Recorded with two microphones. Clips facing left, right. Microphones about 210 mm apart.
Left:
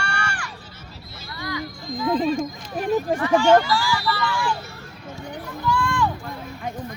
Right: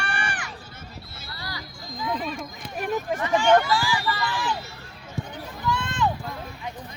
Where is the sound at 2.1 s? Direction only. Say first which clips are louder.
Left 12 dB; 30° left (ahead or behind).